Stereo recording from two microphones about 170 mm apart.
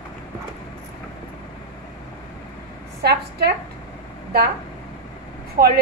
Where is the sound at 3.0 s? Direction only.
75° right (ahead or behind).